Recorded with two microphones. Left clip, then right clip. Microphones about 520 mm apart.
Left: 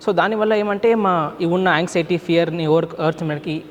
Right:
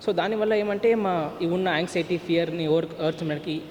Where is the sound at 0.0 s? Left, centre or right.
Left.